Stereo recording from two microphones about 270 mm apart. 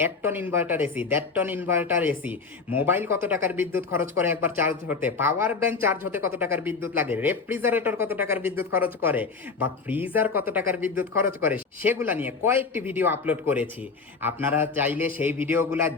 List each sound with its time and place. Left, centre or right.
0.0 s speech: centre